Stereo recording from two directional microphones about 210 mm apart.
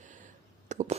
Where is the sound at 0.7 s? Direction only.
35° right (ahead or behind).